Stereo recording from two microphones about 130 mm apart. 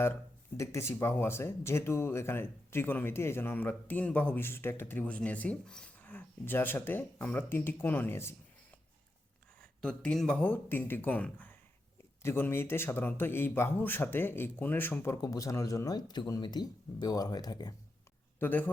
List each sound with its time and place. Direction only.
0.0 s speech: 20° left (ahead or behind)
9.6 s speech: 5° left (ahead or behind); by 17.7 s 30° left (ahead or behind)
18.3 s speech: 15° left (ahead or behind)